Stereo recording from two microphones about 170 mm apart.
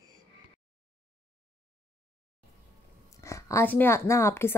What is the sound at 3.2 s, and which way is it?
Speech, 20° left (ahead or behind).